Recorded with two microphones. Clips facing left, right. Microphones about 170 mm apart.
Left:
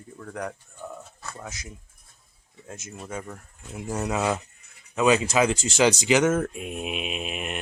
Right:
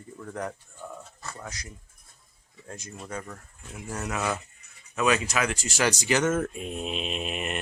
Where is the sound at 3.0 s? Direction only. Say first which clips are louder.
Left 2 dB; 10° left (ahead or behind).